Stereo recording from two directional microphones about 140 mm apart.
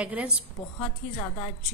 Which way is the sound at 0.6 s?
45° left (ahead or behind).